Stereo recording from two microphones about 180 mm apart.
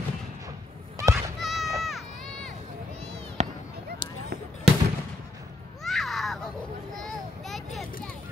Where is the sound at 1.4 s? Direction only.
Centre (ahead or behind).